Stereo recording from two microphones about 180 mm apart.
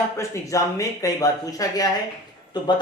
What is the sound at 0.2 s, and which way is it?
Speech, 15° left (ahead or behind).